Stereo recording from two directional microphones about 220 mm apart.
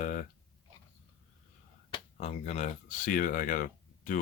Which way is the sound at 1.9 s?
30° left (ahead or behind).